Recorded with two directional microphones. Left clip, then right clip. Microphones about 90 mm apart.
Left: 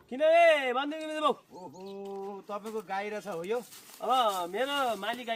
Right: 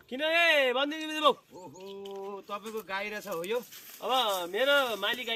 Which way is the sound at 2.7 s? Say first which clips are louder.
Left 1 dB; 25° left (ahead or behind).